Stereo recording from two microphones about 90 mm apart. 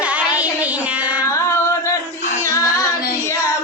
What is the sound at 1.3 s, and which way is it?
Music, 30° left (ahead or behind).